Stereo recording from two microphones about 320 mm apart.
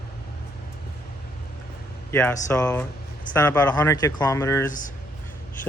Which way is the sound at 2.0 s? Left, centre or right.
Centre.